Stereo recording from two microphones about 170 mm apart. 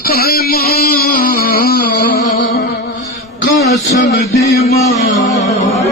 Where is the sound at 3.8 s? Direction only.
65° left (ahead or behind).